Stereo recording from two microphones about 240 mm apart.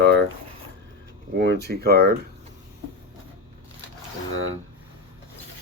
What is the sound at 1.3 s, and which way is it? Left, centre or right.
Speech, right.